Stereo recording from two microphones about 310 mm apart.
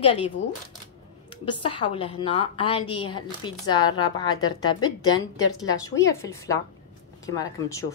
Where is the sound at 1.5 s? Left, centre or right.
Centre.